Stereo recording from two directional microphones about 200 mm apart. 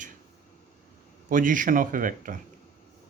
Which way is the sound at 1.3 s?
40° right (ahead or behind).